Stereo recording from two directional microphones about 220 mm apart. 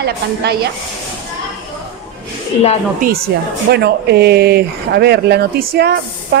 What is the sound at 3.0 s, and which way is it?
A woman's voice, 40° right (ahead or behind).